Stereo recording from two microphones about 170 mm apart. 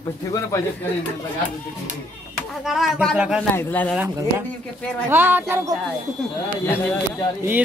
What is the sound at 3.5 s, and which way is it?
Speech, 10° left (ahead or behind).